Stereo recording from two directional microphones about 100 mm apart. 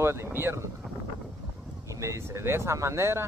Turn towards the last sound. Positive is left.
turn(degrees=-25)  # may be behind; listen again after turning